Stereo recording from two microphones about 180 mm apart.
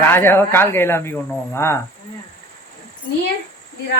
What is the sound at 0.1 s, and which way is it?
Speech, 15° left (ahead or behind).